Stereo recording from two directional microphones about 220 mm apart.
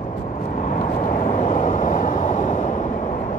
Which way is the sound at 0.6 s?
35° left (ahead or behind).